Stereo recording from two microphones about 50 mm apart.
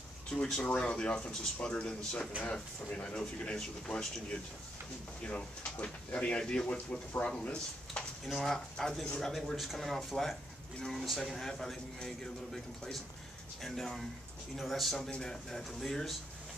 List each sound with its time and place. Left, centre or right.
0.3 s speech: centre
3.5 s speech: centre
5.3 s speech: left
8.3 s a man's voice: centre